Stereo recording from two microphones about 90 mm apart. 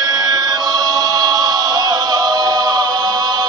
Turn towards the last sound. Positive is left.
turn(degrees=-50)  # may be behind; listen again after turning